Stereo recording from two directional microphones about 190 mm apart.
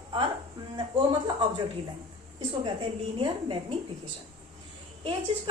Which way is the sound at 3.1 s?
30° right (ahead or behind).